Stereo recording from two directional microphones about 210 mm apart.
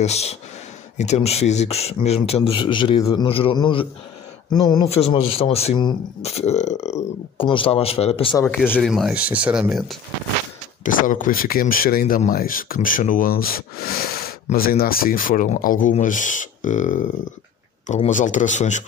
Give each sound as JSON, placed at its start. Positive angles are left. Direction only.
{"t": 0.0, "sound": "speech", "side_deg": 30}
{"t": 8.7, "sound": "speech", "side_deg": 0}
{"t": 10.8, "sound": "speech", "side_deg": 40}